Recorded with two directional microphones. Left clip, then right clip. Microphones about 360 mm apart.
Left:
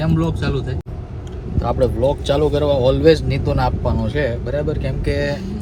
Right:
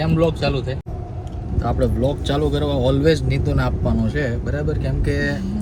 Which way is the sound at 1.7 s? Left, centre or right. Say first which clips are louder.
Left 5 dB; left.